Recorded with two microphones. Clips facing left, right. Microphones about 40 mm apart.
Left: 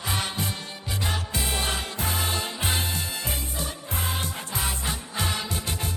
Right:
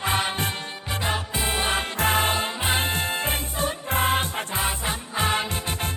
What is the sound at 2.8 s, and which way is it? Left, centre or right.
Music, right.